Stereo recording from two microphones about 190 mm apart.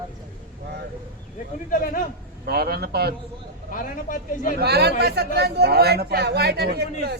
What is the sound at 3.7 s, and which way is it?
Speech, 45° left (ahead or behind).